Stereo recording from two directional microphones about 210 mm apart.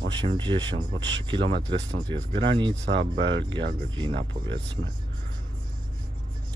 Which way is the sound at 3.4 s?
20° right (ahead or behind).